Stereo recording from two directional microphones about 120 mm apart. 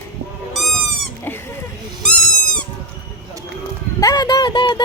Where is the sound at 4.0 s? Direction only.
30° left (ahead or behind).